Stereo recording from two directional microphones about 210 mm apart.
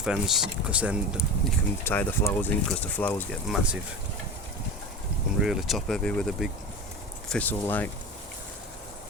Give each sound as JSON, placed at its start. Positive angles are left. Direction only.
{"t": 0.0, "sound": "speech", "side_deg": 0}
{"t": 1.8, "sound": "speech", "side_deg": 10}
{"t": 3.5, "sound": "speech", "side_deg": -5}
{"t": 5.4, "sound": "speech", "side_deg": 0}